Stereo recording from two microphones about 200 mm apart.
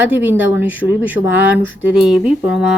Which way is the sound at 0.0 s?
10° right (ahead or behind).